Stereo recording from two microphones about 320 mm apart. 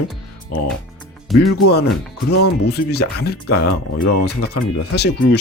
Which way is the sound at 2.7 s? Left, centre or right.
Left.